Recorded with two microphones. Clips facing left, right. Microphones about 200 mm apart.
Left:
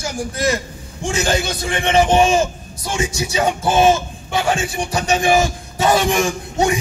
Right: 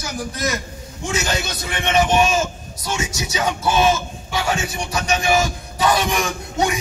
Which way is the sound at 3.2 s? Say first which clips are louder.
Left 5 dB; 30° left (ahead or behind).